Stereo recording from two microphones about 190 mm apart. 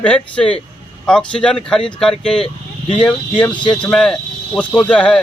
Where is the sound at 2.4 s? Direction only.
25° left (ahead or behind).